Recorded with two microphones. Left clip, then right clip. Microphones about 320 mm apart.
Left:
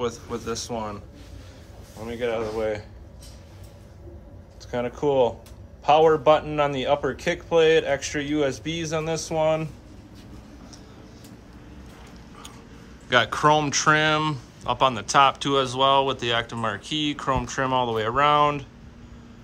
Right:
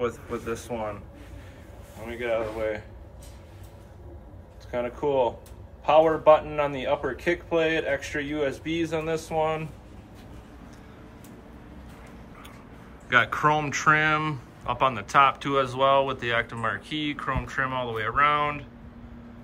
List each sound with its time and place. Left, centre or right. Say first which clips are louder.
0.0 s speech: left 1 dB; centre
2.0 s speech: left 1 dB; centre
4.6 s speech: left 3 dB; left
13.1 s speech: left 2 dB; centre